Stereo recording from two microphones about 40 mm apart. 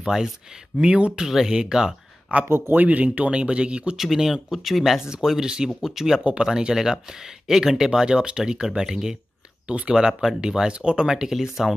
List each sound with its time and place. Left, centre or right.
0.0 s speech: centre
0.9 s speech: right
1.5 s speech: centre
2.4 s speech: right
2.7 s speech: right
3.9 s speech: centre
10.7 s speech: right
11.1 s speech: centre